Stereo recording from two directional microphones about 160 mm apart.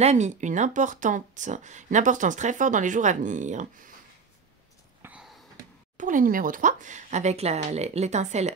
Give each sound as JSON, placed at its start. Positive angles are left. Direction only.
{"t": 0.0, "sound": "speech", "side_deg": -45}
{"t": 5.0, "sound": "a sound", "side_deg": -5}
{"t": 5.9, "sound": "speech", "side_deg": -55}